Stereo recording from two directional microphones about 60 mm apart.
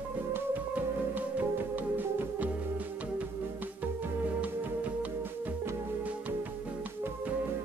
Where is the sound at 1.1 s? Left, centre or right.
Right.